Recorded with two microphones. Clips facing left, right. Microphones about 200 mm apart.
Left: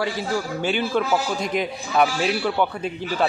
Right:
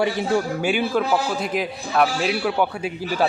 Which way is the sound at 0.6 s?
10° right (ahead or behind).